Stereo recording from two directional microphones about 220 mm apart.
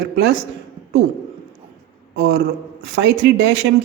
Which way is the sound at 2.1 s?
50° right (ahead or behind).